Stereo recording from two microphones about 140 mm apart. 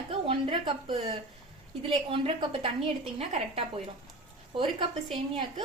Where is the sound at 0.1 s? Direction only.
40° right (ahead or behind).